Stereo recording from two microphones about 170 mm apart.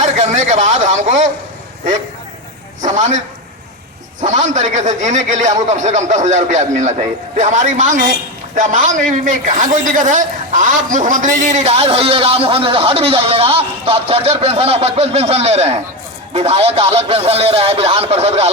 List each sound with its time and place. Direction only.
0.0 s speech: 45° right (ahead or behind)
2.8 s a man's voice: 45° right (ahead or behind)
4.2 s a man's voice: 45° right (ahead or behind)